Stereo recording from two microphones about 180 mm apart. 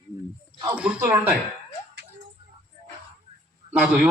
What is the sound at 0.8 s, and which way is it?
Speech, 5° right (ahead or behind).